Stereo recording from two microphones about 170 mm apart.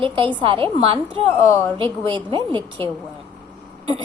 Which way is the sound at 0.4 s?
30° right (ahead or behind).